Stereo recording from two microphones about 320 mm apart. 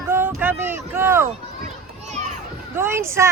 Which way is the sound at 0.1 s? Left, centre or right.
Centre.